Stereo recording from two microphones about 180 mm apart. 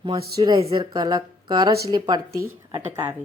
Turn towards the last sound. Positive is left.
turn(degrees=-10)  # may be behind; listen again after turning